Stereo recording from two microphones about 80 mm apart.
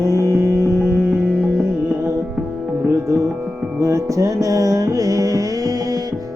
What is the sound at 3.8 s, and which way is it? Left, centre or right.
Music, right.